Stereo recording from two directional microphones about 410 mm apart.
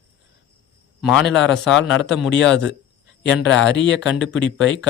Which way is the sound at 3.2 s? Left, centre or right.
Left.